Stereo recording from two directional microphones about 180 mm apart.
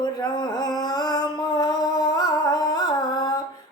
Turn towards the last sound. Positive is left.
turn(degrees=20)  # may be behind; listen again after turning